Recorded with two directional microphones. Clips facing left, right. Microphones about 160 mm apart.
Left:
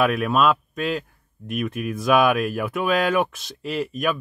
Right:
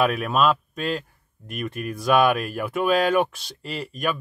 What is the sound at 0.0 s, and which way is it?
Speech, centre (ahead or behind).